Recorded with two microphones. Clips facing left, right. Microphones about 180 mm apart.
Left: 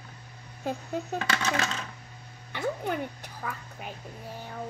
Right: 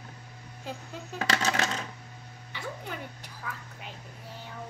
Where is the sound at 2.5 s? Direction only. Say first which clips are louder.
Left 8 dB; 55° left (ahead or behind).